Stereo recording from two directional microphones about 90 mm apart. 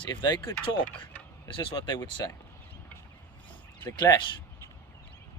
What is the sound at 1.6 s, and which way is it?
Speech, 65° left (ahead or behind).